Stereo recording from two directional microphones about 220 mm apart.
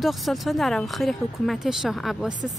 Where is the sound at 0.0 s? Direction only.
Centre (ahead or behind).